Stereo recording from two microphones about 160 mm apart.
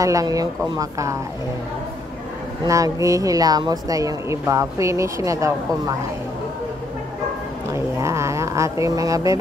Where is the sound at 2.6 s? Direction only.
20° right (ahead or behind).